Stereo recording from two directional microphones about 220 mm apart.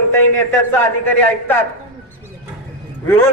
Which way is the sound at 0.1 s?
10° left (ahead or behind).